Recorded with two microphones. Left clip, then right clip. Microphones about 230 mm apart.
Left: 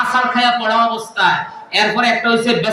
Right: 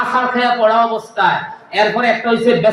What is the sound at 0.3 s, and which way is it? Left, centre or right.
Speech, left.